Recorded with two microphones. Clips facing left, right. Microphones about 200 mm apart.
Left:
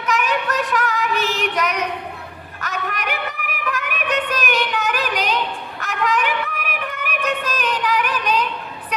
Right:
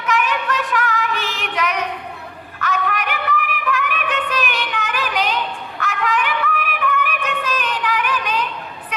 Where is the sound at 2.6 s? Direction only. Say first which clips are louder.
Right 4 dB; 40° left (ahead or behind).